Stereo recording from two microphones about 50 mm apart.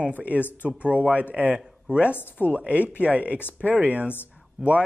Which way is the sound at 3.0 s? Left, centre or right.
Right.